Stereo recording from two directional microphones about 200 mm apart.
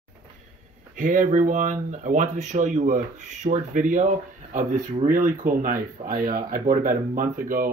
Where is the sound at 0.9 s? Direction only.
40° right (ahead or behind).